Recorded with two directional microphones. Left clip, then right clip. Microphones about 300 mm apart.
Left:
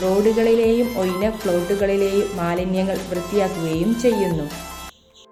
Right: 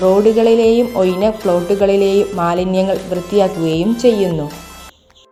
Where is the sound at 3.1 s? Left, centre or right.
Centre.